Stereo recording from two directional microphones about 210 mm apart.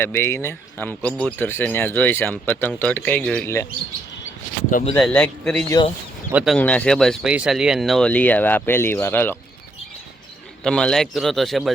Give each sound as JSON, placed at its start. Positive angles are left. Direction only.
{"t": 0.0, "sound": "speech", "side_deg": 10}
{"t": 4.9, "sound": "speech", "side_deg": 5}
{"t": 10.6, "sound": "speech", "side_deg": 5}